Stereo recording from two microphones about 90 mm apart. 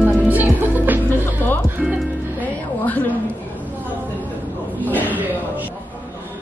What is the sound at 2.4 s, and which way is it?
Music, 20° left (ahead or behind).